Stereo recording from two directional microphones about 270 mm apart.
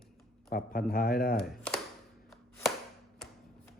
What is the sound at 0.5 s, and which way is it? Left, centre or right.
Speech, left.